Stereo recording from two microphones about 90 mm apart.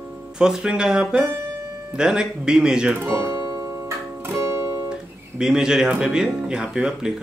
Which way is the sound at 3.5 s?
35° right (ahead or behind).